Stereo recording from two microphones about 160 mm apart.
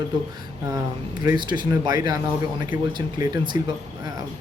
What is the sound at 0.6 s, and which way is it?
Speech, 20° right (ahead or behind).